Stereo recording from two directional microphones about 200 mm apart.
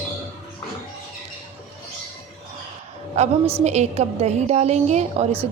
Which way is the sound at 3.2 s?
35° right (ahead or behind).